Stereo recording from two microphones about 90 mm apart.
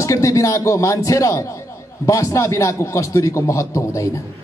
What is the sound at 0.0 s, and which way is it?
A man's voice, 35° left (ahead or behind).